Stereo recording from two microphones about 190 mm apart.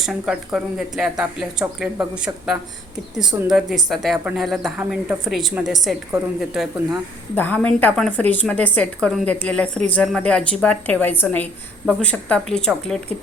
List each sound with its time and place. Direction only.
0.0 s speech: 5° right (ahead or behind)
3.2 s speech: 20° right (ahead or behind)
3.8 s speech: centre (ahead or behind)
6.1 s a woman's voice: 10° right (ahead or behind)
7.3 s a woman's voice: 10° left (ahead or behind)